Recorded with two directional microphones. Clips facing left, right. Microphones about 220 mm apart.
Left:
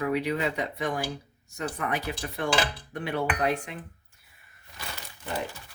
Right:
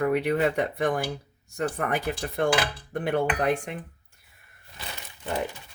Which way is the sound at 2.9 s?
55° right (ahead or behind).